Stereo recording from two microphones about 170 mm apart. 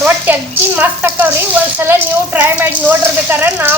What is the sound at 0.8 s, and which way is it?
Speech, 10° right (ahead or behind).